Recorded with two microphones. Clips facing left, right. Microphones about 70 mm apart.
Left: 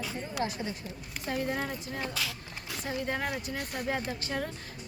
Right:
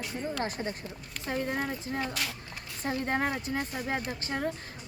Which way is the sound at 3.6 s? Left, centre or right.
Left.